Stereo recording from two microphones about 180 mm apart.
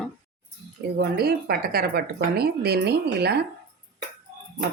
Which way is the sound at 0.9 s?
60° right (ahead or behind).